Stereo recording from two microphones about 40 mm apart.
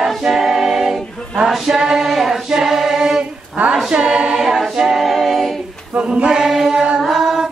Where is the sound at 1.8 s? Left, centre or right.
Centre.